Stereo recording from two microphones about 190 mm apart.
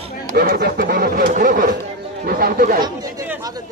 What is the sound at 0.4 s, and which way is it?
Speech, 55° right (ahead or behind).